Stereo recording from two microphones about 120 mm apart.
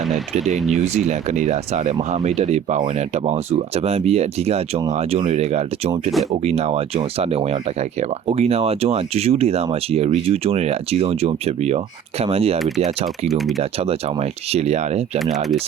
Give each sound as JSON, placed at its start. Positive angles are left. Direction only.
{"t": 0.3, "sound": "speech", "side_deg": -75}
{"t": 2.2, "sound": "speech", "side_deg": -65}
{"t": 12.5, "sound": "speech", "side_deg": 0}
{"t": 13.6, "sound": "speech", "side_deg": -55}